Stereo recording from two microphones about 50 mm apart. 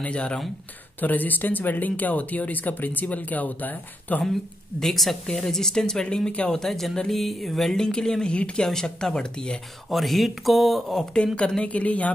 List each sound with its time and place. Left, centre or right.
0.0 s a woman's voice: left
1.0 s speech: left
4.2 s speech: centre
8.6 s speech: centre
9.8 s speech: centre
11.3 s a woman's voice: left